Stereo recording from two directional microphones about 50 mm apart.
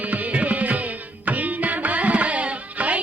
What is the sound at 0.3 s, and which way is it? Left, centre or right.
Music, right.